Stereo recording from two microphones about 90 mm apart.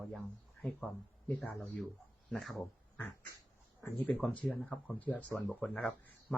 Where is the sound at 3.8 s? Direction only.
20° left (ahead or behind).